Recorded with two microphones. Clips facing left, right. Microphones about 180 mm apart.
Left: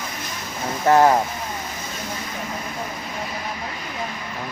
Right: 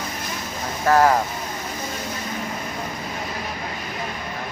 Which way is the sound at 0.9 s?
25° left (ahead or behind).